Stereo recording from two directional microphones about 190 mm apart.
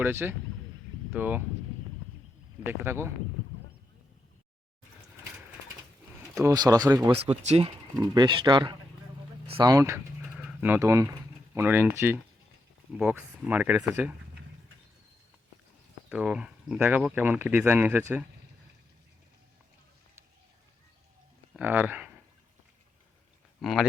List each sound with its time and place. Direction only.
0.0 s speech: 10° right (ahead or behind)
2.6 s speech: 15° right (ahead or behind)
6.4 s speech: 20° right (ahead or behind)
7.3 s speech: 35° right (ahead or behind)
8.1 s speech: 25° right (ahead or behind)
10.3 s pigeon: 5° right (ahead or behind)
11.5 s speech: 10° right (ahead or behind)
16.0 s speech: 5° right (ahead or behind)
21.5 s speech: 10° right (ahead or behind)
23.6 s speech: centre (ahead or behind)